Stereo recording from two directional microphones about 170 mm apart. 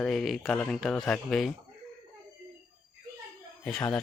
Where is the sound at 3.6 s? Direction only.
5° left (ahead or behind).